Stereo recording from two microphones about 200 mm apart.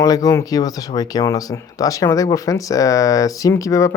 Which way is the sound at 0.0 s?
15° left (ahead or behind).